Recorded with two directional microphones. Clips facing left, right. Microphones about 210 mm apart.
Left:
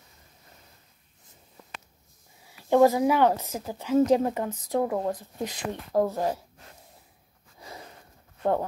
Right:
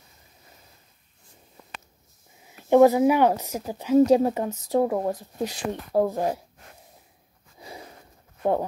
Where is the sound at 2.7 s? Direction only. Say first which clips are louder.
Right 3 dB; 20° right (ahead or behind).